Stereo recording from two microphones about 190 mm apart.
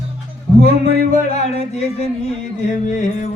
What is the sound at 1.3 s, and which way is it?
Music, 35° left (ahead or behind).